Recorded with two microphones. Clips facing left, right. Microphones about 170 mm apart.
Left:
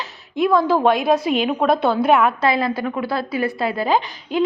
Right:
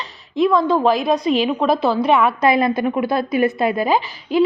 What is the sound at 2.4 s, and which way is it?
A woman's voice, 20° right (ahead or behind).